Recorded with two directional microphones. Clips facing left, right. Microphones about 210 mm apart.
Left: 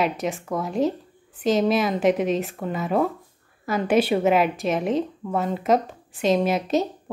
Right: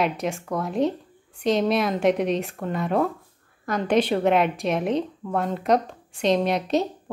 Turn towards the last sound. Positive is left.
turn(degrees=0)  # may be behind; listen again after turning